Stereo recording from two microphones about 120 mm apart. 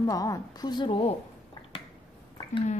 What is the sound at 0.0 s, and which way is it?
A woman's voice, 30° left (ahead or behind).